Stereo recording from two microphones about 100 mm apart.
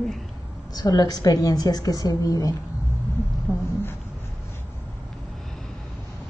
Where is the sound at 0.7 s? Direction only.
40° left (ahead or behind).